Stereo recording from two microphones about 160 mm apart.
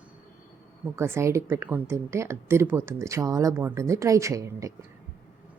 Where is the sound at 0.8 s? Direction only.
15° right (ahead or behind).